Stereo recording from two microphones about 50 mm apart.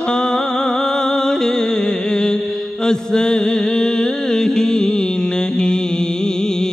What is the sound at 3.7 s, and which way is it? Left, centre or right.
Music, centre.